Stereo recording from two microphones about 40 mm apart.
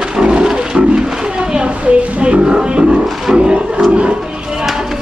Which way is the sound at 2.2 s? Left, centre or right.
Right.